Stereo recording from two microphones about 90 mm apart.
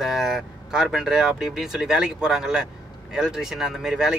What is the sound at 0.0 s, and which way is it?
Speech, 5° right (ahead or behind).